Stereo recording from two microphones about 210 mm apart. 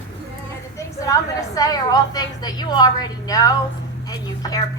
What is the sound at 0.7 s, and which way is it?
A woman's voice, 15° left (ahead or behind).